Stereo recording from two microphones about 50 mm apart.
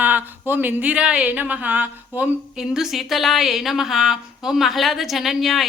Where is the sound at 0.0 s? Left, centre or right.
Right.